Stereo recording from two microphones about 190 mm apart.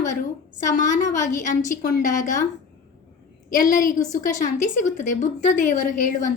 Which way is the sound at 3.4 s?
45° left (ahead or behind).